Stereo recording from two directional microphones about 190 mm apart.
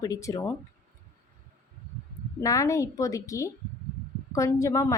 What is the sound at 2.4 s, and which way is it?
Speech, 15° left (ahead or behind).